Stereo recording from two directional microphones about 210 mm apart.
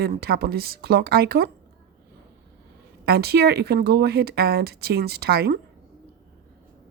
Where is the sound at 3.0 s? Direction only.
50° right (ahead or behind).